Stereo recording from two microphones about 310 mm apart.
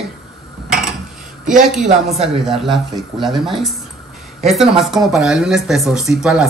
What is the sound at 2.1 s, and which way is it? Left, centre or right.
Speech, centre.